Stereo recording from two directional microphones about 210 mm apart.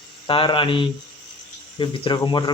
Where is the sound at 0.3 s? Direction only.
25° left (ahead or behind).